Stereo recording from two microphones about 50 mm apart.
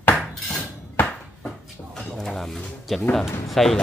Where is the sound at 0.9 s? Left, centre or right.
Left.